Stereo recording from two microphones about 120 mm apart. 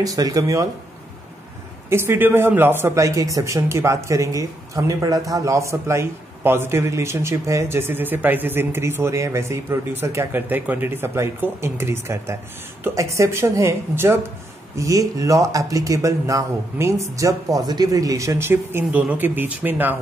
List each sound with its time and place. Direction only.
0.0 s speech: 30° right (ahead or behind)
1.9 s speech: 20° right (ahead or behind)